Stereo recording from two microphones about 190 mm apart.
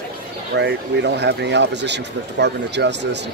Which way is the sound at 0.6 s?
65° right (ahead or behind).